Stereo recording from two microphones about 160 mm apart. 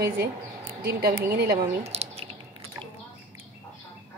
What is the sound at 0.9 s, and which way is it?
Speech, 75° right (ahead or behind).